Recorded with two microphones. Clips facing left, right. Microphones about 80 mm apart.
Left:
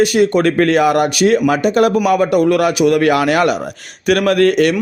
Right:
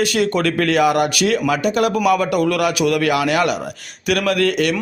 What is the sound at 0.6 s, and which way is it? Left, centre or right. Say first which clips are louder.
A man's voice: left 2 dB; left.